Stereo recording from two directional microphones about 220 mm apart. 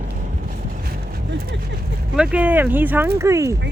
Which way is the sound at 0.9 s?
45° right (ahead or behind).